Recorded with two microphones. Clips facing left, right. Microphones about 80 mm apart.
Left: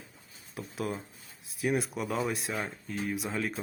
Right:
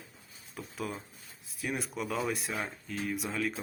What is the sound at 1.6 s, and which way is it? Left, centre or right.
Speech, centre.